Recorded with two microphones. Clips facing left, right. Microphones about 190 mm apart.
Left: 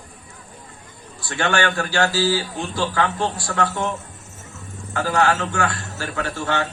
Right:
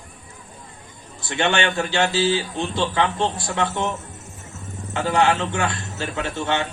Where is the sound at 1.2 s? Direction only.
20° right (ahead or behind).